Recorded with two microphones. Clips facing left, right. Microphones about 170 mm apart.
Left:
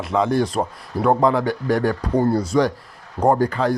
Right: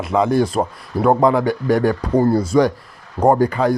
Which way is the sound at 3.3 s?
15° right (ahead or behind).